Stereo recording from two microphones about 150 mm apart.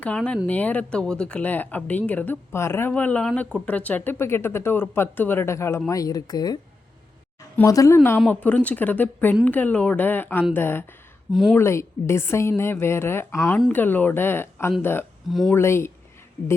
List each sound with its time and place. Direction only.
0.0 s speech: 5° left (ahead or behind)
11.3 s speech: centre (ahead or behind)
11.5 s speech: 15° left (ahead or behind)
15.3 s speech: centre (ahead or behind)
15.5 s speech: 15° left (ahead or behind)